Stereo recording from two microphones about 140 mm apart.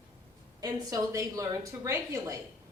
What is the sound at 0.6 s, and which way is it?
A woman's voice, 25° right (ahead or behind).